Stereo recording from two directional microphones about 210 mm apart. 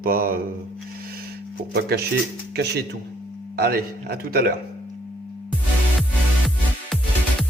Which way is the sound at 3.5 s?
50° right (ahead or behind).